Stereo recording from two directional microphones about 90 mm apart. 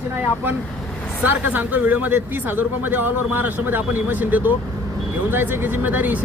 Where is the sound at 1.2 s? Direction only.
20° right (ahead or behind).